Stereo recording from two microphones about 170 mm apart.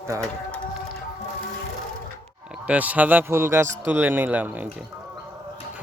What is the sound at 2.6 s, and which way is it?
Speech, 10° right (ahead or behind).